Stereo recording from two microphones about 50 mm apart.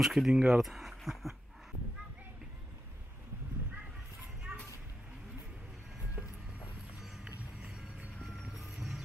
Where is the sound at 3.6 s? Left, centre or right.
Right.